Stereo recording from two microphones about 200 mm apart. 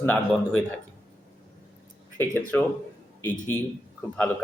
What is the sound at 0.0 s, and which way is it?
Speech, 10° left (ahead or behind).